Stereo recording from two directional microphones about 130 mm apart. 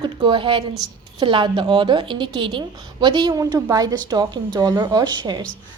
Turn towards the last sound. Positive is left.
turn(degrees=-35)  # may be behind; listen again after turning